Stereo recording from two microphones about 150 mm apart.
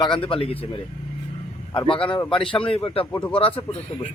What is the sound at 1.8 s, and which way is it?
A man's voice, 35° left (ahead or behind).